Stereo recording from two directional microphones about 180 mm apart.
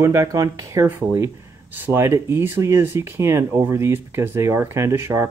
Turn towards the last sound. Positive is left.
turn(degrees=-15)  # may be behind; listen again after turning